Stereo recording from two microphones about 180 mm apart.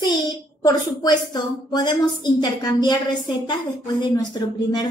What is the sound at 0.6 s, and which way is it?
A woman's voice, 20° left (ahead or behind).